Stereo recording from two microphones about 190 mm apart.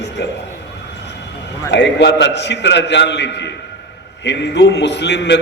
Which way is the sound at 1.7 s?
65° left (ahead or behind).